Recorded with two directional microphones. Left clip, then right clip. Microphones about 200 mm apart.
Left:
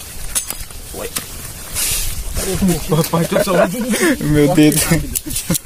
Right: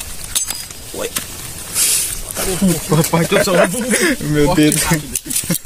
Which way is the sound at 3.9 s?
15° left (ahead or behind).